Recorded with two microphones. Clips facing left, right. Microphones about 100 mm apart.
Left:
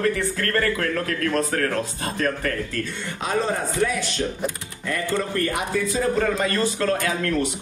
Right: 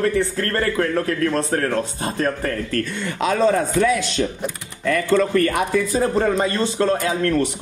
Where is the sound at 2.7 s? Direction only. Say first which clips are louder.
Right 5 dB; 70° right (ahead or behind).